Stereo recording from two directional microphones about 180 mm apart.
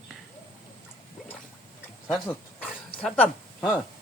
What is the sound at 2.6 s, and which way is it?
Dog, 5° left (ahead or behind).